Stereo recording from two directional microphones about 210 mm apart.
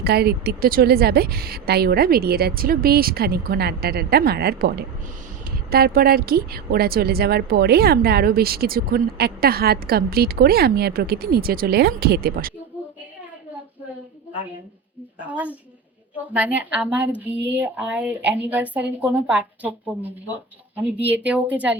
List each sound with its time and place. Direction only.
0.0 s a woman's voice: 50° right (ahead or behind)
5.7 s a woman's voice: 45° right (ahead or behind)
15.3 s speech: 5° right (ahead or behind)